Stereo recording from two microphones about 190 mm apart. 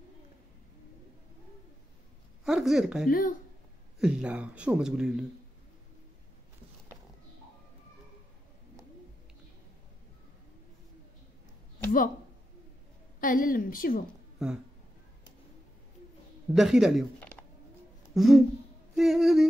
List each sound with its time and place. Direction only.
2.4 s speech: centre (ahead or behind)
3.1 s a woman's voice: 50° left (ahead or behind)
4.0 s speech: 5° right (ahead or behind)
13.2 s a woman's voice: 45° left (ahead or behind)
14.4 s speech: 5° right (ahead or behind)
16.5 s speech: centre (ahead or behind)